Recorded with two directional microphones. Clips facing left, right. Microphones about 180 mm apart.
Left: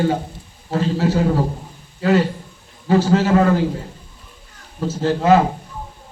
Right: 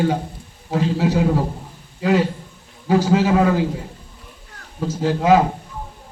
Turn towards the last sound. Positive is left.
turn(degrees=-10)  # may be behind; listen again after turning